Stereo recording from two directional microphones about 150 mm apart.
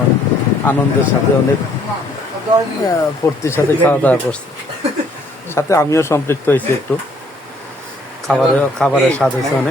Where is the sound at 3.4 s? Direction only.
15° left (ahead or behind).